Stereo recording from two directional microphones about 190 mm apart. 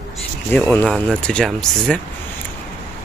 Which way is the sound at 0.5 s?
10° left (ahead or behind).